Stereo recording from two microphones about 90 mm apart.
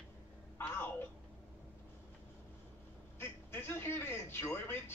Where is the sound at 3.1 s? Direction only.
25° left (ahead or behind).